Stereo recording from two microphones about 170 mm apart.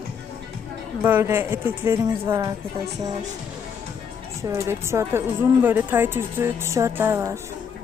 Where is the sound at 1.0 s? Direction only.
15° right (ahead or behind).